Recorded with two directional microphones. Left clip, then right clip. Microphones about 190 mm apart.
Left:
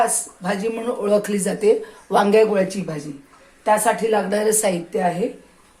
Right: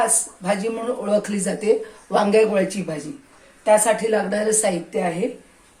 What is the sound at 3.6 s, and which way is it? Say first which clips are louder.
Speech: right 1 dB; 25° left (ahead or behind).